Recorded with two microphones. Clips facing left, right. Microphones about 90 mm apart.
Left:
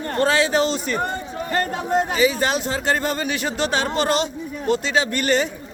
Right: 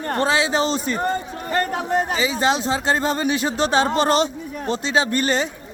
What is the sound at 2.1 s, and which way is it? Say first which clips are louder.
Speech: left 1 dB; 25° right (ahead or behind).